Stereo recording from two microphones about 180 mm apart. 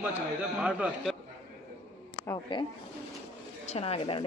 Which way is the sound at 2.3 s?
25° left (ahead or behind).